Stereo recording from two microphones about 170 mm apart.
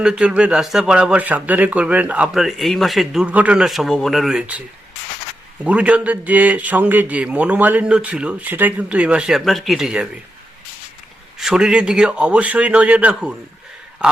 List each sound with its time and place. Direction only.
0.0 s a man's voice: 5° right (ahead or behind)
5.6 s speech: 5° right (ahead or behind)
11.3 s speech: centre (ahead or behind)